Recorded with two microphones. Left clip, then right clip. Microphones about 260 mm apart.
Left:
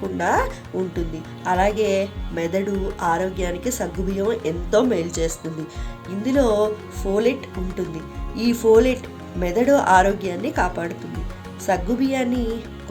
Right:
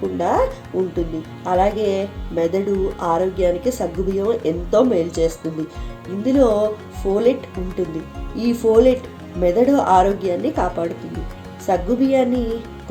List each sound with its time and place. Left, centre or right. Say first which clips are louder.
0.2 s speech: right 2 dB; left
8.4 s speech: right 1 dB; left